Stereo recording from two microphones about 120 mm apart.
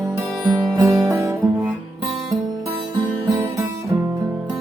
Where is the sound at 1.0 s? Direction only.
25° right (ahead or behind).